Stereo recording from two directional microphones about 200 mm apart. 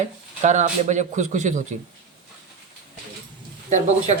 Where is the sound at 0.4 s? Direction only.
35° right (ahead or behind).